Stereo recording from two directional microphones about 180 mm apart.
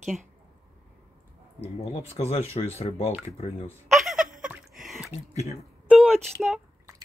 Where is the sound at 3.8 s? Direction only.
Centre (ahead or behind).